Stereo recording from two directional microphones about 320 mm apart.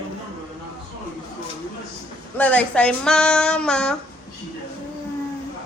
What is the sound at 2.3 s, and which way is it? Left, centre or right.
Speech, centre.